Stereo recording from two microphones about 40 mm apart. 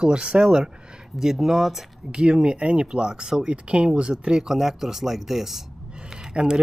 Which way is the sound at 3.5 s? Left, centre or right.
Right.